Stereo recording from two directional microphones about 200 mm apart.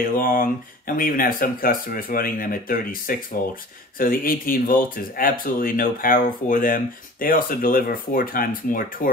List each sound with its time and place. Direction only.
0.2 s speech: 45° left (ahead or behind)